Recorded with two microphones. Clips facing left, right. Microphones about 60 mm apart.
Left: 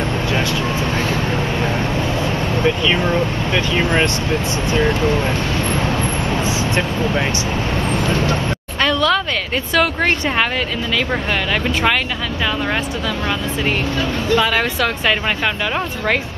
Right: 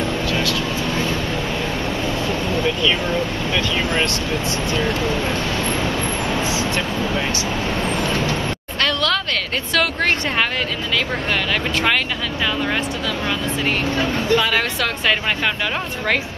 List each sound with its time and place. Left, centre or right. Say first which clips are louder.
0.3 s vehicle: left 2 dB; left
2.5 s speech: left 3 dB; centre
6.4 s speech: left 2 dB; left
8.8 s a sound: left 4 dB; centre
14.0 s speech: left 2 dB; centre